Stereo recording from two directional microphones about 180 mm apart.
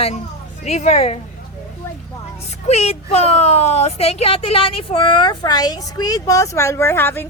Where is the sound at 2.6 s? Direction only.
35° left (ahead or behind).